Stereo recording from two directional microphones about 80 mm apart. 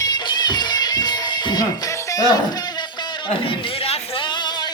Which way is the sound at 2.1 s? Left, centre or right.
Left.